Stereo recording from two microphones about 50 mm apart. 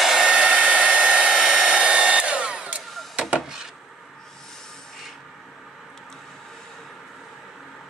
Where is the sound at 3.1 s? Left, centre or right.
Right.